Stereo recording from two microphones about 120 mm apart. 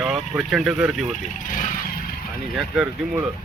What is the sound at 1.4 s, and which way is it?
Vehicle, 90° left.